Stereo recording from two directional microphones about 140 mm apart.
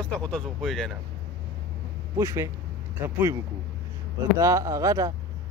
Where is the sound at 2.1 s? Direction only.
20° right (ahead or behind).